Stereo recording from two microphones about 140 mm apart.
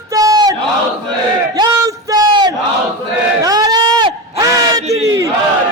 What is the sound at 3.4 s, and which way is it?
Run, 25° right (ahead or behind).